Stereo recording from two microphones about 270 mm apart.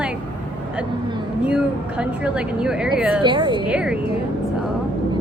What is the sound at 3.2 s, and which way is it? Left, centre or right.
Speech, centre.